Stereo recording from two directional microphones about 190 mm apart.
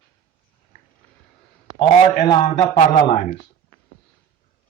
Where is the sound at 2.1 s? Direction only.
40° left (ahead or behind).